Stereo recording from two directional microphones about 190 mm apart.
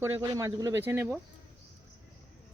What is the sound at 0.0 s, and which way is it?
Speech, 15° right (ahead or behind).